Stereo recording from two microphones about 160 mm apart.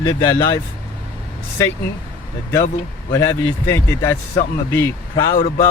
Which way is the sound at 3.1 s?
20° left (ahead or behind).